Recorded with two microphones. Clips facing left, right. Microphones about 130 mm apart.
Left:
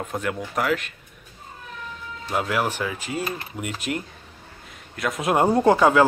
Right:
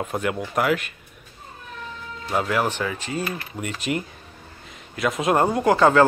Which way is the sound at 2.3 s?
5° left (ahead or behind).